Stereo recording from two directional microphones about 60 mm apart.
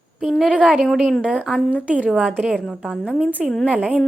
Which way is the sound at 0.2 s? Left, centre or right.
Centre.